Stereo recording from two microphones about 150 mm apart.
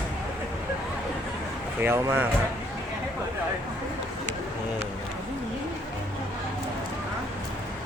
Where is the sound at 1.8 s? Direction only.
15° right (ahead or behind).